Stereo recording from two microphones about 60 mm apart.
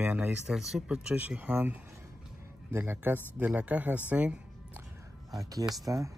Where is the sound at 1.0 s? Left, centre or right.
Right.